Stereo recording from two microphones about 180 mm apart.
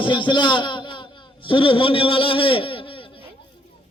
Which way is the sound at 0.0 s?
25° left (ahead or behind).